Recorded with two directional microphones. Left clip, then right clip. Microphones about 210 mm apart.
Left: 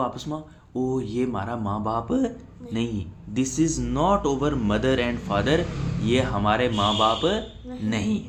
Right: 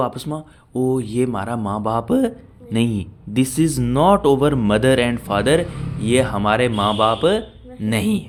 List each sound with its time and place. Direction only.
0.0 s speech: 45° right (ahead or behind)